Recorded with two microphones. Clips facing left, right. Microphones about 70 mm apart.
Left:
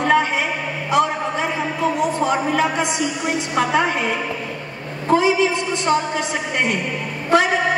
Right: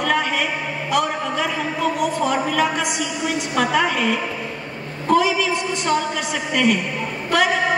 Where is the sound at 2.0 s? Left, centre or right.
Left.